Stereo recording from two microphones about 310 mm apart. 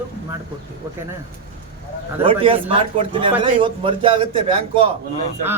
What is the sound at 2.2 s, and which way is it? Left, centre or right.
A man's voice, centre.